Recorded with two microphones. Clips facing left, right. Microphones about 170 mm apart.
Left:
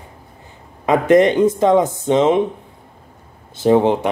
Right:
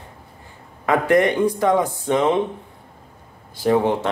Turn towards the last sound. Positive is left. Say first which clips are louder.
# left 4 dB
turn(degrees=20)  # may be behind; listen again after turning